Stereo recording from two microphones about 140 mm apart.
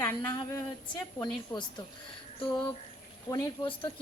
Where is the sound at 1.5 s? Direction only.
30° left (ahead or behind).